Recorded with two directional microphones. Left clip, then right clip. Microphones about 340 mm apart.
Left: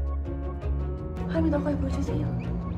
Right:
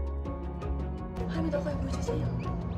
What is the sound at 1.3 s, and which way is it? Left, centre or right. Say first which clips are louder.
Speech: left 6 dB; centre.